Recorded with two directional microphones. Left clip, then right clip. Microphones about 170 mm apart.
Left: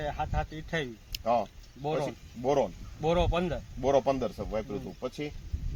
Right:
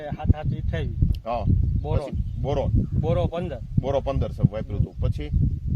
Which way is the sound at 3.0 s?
40° right (ahead or behind).